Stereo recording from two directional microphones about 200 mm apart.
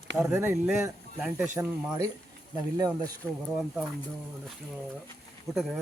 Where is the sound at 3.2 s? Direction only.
5° left (ahead or behind).